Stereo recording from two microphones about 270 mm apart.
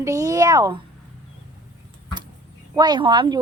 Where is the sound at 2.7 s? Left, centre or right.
Centre.